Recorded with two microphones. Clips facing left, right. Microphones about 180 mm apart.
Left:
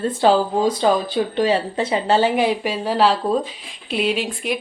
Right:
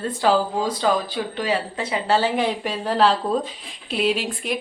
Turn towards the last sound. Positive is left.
turn(degrees=0)  # may be behind; listen again after turning